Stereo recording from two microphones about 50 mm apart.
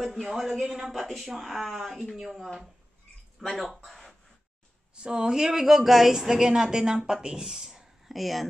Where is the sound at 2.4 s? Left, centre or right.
Centre.